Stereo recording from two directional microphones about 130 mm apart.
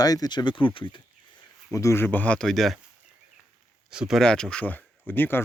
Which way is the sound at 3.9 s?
5° right (ahead or behind).